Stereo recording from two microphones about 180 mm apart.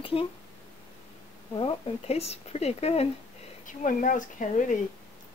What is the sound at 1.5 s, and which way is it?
A woman's voice, 30° left (ahead or behind).